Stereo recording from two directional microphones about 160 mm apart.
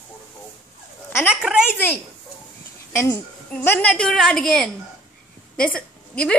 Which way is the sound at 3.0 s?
10° left (ahead or behind).